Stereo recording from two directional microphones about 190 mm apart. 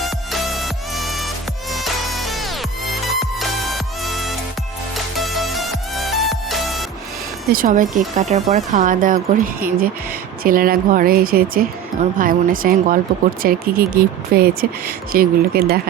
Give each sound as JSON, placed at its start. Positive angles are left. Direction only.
{"t": 0.0, "sound": "music", "side_deg": 0}
{"t": 7.5, "sound": "speech", "side_deg": -45}